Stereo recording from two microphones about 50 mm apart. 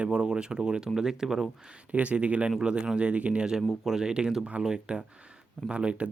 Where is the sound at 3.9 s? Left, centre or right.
Centre.